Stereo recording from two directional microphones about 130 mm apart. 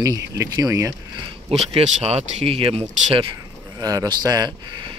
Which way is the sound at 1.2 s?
50° right (ahead or behind).